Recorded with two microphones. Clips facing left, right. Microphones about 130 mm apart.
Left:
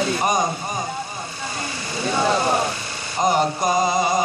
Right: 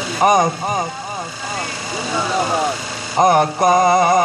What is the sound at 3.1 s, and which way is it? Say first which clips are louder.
Music: right 6 dB; 60° right (ahead or behind).